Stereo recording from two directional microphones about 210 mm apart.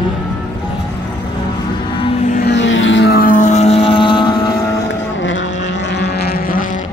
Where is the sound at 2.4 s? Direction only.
60° left (ahead or behind); by 4.4 s 20° left (ahead or behind).